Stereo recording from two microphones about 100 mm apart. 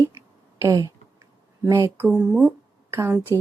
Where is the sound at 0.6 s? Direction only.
35° right (ahead or behind).